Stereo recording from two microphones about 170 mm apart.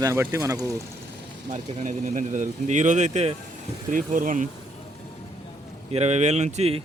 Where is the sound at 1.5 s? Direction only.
45° right (ahead or behind).